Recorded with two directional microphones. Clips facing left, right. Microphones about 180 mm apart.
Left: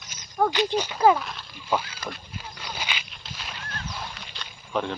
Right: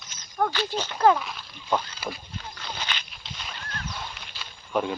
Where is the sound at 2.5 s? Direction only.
10° left (ahead or behind).